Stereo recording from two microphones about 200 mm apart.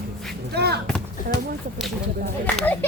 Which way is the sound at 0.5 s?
55° right (ahead or behind).